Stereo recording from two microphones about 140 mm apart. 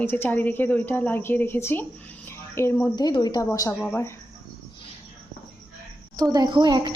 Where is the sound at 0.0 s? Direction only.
15° left (ahead or behind).